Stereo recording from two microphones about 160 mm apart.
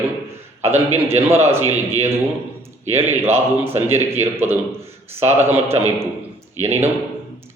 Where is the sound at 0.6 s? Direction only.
40° right (ahead or behind).